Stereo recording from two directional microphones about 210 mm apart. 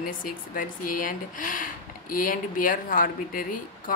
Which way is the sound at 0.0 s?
40° left (ahead or behind).